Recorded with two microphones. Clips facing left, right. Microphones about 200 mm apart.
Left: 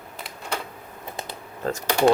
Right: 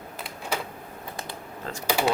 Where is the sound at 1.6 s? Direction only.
45° left (ahead or behind).